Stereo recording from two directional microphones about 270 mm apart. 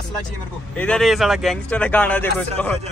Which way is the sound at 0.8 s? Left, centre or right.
Centre.